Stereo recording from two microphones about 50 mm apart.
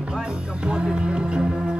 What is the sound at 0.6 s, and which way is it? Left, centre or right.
Music, centre.